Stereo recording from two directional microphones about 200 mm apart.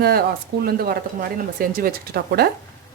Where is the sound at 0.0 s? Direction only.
50° right (ahead or behind).